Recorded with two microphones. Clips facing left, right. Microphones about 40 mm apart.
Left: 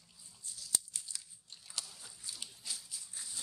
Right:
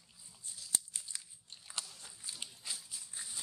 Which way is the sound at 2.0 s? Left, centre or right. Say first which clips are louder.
Right 1 dB; right.